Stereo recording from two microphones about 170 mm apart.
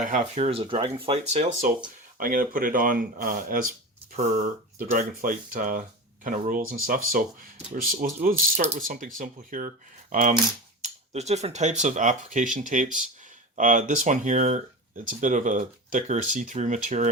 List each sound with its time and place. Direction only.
0.0 s speech: 45° right (ahead or behind)
2.1 s speech: 55° right (ahead or behind)